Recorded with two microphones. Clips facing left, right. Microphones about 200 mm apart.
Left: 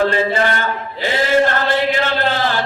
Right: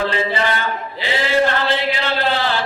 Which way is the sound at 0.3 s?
45° left (ahead or behind).